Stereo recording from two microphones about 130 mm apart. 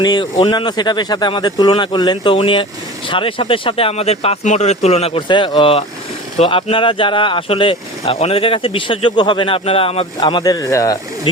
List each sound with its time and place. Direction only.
0.0 s speech: 35° left (ahead or behind)
10.2 s speech: 35° left (ahead or behind)